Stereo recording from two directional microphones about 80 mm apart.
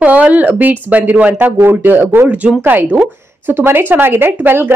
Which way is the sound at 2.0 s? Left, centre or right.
Right.